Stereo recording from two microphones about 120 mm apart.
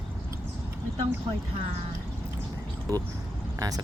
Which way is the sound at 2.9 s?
30° right (ahead or behind).